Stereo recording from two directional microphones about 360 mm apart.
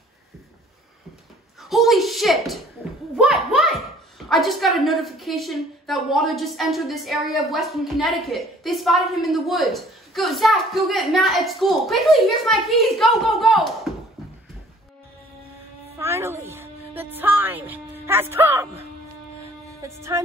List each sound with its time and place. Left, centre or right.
1.6 s speech: centre
3.2 s a sound: centre
4.3 s a woman's voice: centre
16.0 s music: centre